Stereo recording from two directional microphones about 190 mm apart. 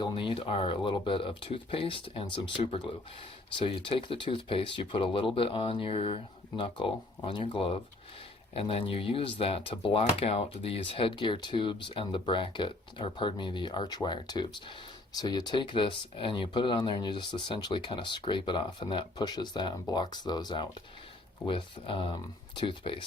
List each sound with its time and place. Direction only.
0.0 s speech: 25° left (ahead or behind)
3.6 s speech: 25° left (ahead or behind)